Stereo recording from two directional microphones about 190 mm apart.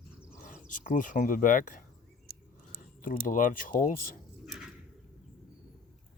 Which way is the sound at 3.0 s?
45° left (ahead or behind).